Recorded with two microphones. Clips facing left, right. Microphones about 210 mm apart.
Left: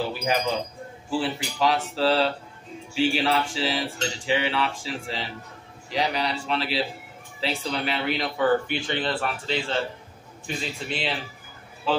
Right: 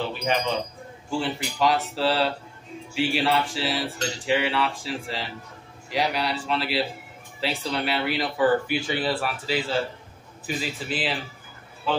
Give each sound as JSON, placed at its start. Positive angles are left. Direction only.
{"t": 0.1, "sound": "speech", "side_deg": 5}